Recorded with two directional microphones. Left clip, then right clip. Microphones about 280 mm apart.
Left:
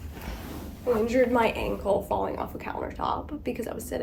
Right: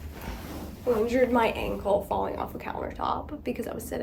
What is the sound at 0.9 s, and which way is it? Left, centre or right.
A woman's voice, centre.